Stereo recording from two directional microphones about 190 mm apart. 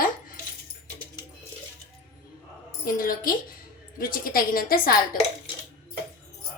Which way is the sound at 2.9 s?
45° left (ahead or behind).